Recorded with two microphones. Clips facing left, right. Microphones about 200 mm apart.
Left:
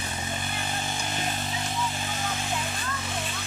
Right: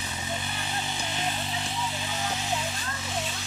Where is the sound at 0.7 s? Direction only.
50° left (ahead or behind).